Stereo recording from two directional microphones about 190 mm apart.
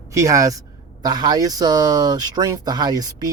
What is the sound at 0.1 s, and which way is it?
Speech, 15° right (ahead or behind).